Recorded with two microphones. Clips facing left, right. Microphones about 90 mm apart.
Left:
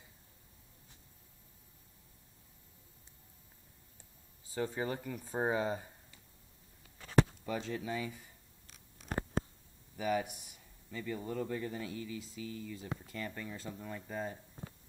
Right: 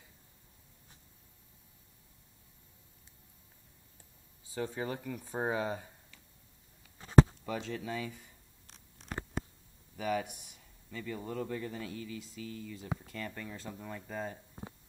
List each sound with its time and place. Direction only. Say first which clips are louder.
4.5 s speech: left 1 dB; centre (ahead or behind)
7.0 s a sound: right 5 dB; 30° right (ahead or behind)
7.4 s speech: even; 5° left (ahead or behind)
9.9 s a man's voice: even; 5° left (ahead or behind)
12.7 s speech: right 2 dB; 10° right (ahead or behind)
13.0 s speech: even; 5° left (ahead or behind)